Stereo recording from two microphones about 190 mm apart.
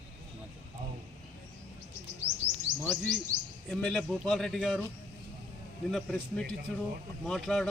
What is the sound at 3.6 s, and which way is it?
Speech, 5° left (ahead or behind).